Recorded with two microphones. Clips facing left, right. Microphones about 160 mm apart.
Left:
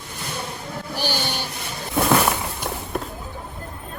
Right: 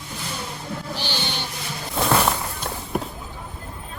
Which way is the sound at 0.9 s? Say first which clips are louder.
Left 7 dB; 10° left (ahead or behind).